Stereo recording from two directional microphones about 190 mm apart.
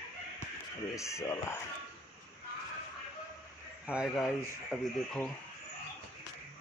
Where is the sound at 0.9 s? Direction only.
15° left (ahead or behind).